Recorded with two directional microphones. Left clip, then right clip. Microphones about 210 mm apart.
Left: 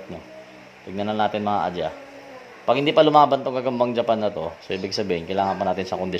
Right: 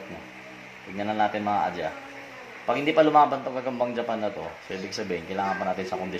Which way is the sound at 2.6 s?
50° left (ahead or behind).